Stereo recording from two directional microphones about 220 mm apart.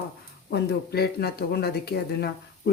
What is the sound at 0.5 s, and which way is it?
Speech, 45° left (ahead or behind).